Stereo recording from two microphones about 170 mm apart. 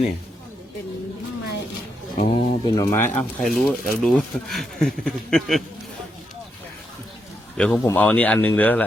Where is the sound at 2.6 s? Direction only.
20° left (ahead or behind).